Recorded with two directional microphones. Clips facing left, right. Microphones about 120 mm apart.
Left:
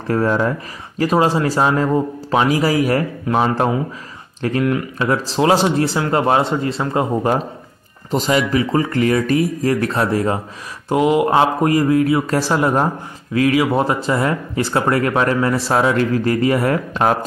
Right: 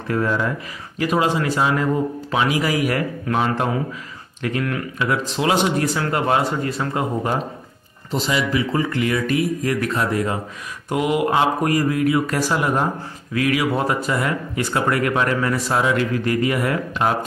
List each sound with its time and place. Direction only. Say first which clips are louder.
0.1 s speech: left 4 dB; 40° left (ahead or behind)
8.1 s speech: left 4 dB; 45° left (ahead or behind)